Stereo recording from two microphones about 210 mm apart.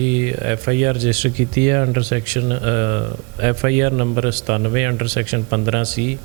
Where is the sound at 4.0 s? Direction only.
30° right (ahead or behind).